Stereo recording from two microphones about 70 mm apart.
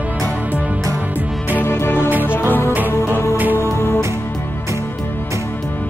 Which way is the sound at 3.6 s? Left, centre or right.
Left.